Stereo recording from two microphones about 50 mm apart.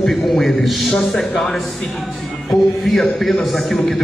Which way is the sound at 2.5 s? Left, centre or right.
Centre.